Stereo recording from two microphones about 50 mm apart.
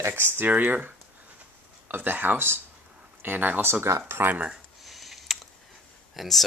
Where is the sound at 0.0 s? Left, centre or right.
Right.